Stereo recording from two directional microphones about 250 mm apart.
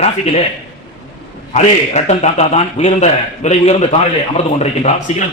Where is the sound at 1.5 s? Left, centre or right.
Left.